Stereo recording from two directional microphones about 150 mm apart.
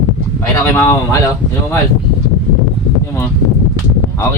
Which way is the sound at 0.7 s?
20° left (ahead or behind).